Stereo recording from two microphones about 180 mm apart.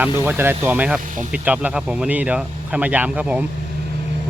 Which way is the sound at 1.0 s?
45° right (ahead or behind).